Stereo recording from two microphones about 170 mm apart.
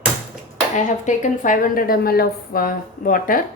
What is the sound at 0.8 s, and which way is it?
A woman's voice, 45° left (ahead or behind).